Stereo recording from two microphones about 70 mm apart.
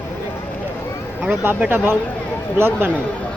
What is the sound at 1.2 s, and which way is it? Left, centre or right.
Speech, right.